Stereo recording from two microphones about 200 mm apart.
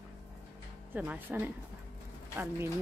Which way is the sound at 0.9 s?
10° right (ahead or behind).